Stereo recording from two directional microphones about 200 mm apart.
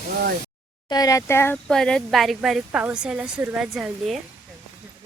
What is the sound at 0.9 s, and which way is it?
Speech, 20° left (ahead or behind).